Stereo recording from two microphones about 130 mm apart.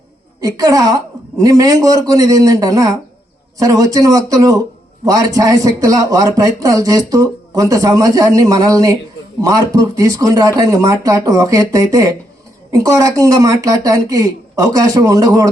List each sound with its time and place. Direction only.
0.4 s speech: 30° right (ahead or behind)